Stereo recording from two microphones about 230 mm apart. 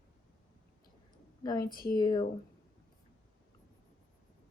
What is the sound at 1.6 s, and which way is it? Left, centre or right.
Speech, left.